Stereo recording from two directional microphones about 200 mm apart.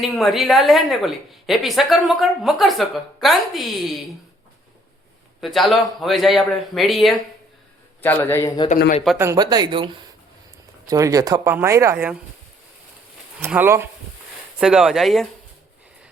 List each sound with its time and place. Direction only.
0.0 s speech: centre (ahead or behind)
5.4 s speech: centre (ahead or behind)
8.0 s a man's voice: 10° left (ahead or behind)
9.1 s speech: 15° right (ahead or behind)
13.4 s speech: 10° right (ahead or behind)